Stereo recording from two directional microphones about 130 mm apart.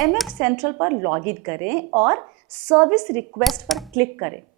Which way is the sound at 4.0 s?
15° right (ahead or behind).